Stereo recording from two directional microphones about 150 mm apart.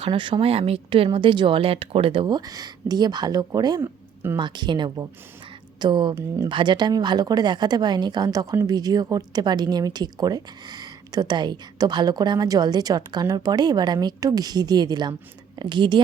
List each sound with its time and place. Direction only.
0.0 s speech: 35° right (ahead or behind)
3.8 s a sound: 15° right (ahead or behind)
4.4 s speech: 30° right (ahead or behind)
6.1 s a woman's voice: 20° right (ahead or behind)
6.5 s a woman's voice: 30° right (ahead or behind)